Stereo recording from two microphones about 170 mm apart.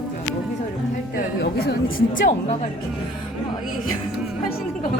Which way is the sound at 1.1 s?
65° left (ahead or behind).